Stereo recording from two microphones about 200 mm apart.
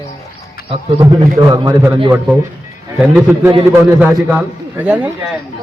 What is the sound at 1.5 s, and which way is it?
A man's voice, 20° right (ahead or behind).